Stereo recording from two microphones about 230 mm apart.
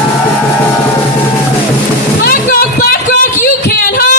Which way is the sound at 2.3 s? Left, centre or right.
Left.